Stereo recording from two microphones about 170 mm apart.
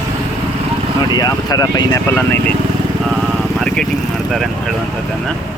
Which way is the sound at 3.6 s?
Centre (ahead or behind).